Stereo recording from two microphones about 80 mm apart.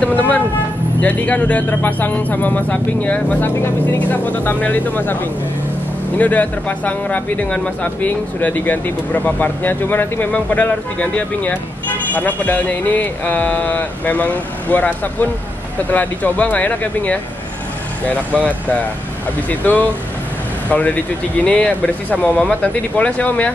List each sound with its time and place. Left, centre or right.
0.0 s speech: centre